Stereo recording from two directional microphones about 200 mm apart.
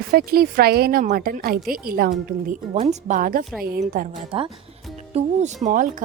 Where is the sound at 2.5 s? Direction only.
40° right (ahead or behind).